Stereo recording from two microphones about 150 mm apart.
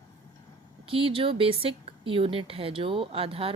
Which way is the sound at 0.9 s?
35° right (ahead or behind).